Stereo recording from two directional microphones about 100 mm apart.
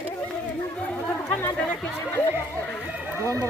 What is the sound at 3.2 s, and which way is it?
Speech, 30° right (ahead or behind).